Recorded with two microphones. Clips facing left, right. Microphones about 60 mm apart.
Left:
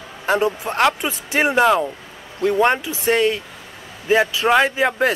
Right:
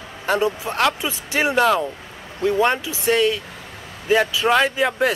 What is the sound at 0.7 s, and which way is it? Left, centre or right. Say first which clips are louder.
Speech: left 2 dB; left.